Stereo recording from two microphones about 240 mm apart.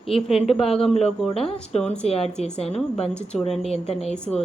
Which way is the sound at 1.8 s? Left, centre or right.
Centre.